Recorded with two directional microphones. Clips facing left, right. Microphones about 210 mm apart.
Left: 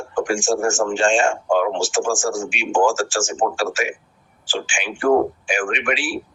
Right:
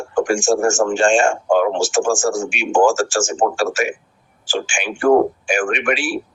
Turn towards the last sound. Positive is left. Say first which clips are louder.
# right 3 dB
turn(degrees=-45)  # may be behind; listen again after turning